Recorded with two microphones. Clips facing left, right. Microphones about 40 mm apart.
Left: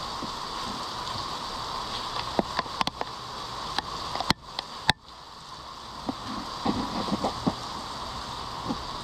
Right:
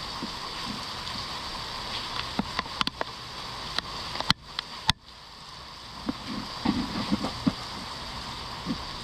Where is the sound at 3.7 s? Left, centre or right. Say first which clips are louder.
Left 2 dB; right.